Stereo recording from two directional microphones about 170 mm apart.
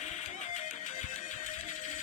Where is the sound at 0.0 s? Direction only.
45° left (ahead or behind).